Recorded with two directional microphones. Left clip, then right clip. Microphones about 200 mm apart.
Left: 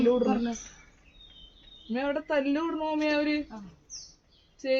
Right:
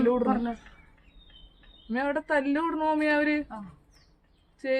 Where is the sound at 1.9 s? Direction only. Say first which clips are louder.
Right 2 dB; 20° left (ahead or behind).